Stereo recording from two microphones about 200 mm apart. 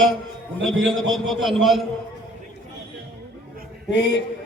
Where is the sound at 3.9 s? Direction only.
60° left (ahead or behind).